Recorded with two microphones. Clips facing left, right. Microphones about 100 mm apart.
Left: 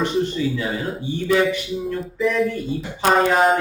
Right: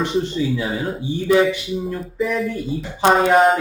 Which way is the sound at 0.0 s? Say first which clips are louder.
Even; 10° right (ahead or behind).